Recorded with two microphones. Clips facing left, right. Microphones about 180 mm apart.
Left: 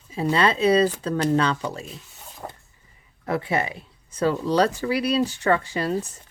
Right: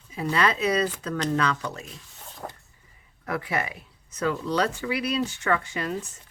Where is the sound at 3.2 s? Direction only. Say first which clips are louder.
Left 4 dB; 25° left (ahead or behind).